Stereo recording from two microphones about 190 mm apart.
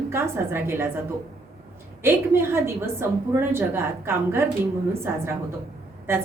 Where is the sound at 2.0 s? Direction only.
10° right (ahead or behind).